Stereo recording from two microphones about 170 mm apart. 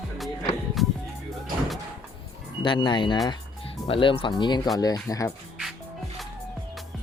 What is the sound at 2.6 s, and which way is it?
Speech, 30° left (ahead or behind).